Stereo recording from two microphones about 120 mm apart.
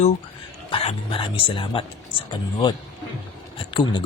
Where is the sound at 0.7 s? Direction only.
55° left (ahead or behind).